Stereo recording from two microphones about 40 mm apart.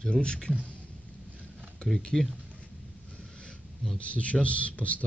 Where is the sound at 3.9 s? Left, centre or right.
Left.